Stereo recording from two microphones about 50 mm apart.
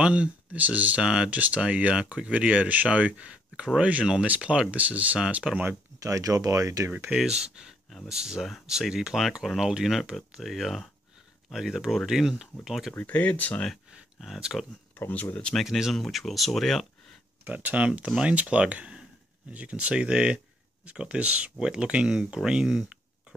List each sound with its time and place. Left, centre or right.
0.0 s speech: right
0.6 s speech: right
1.0 s speech: centre
1.3 s speech: right
5.5 s speech: centre
6.0 s speech: right
7.2 s speech: centre
12.9 s speech: left
14.5 s speech: centre
15.0 s speech: left
15.6 s speech: centre
17.5 s speech: right; by 22.9 s centre